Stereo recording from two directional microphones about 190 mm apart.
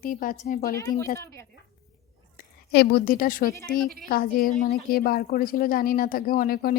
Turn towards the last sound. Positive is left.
turn(degrees=50)  # may be behind; listen again after turning